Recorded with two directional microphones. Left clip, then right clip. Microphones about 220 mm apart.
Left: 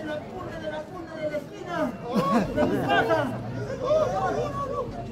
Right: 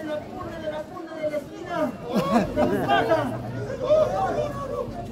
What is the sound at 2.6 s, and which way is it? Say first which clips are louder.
Speech: right 2 dB; 40° right (ahead or behind).